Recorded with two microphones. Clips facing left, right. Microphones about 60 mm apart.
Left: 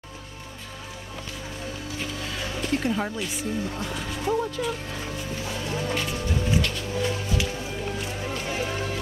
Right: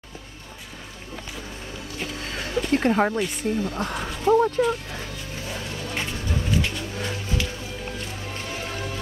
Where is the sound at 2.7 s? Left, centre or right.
Right.